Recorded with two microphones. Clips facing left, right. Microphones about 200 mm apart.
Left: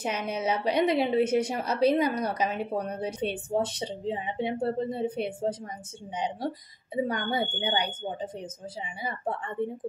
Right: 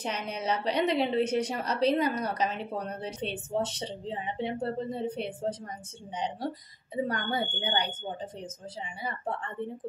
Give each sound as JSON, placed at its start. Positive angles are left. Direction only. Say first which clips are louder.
{"t": 0.0, "sound": "a woman's voice", "louder": "left 4 dB", "side_deg": 10}
{"t": 7.1, "sound": "a woman's voice", "louder": "left 2 dB", "side_deg": 10}
{"t": 9.6, "sound": "a woman's voice", "louder": "left 8 dB", "side_deg": 10}